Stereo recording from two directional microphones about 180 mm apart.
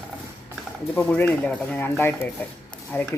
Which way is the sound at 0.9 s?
10° left (ahead or behind).